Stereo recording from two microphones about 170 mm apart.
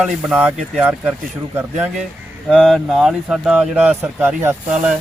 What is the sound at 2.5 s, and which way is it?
Speech, centre (ahead or behind).